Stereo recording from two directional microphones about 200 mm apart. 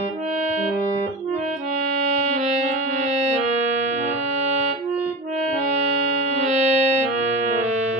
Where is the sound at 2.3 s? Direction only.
35° right (ahead or behind).